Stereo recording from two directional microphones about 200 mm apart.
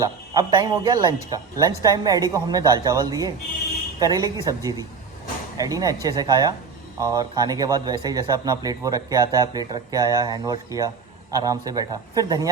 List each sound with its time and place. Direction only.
0.0 s a man's voice: 20° right (ahead or behind)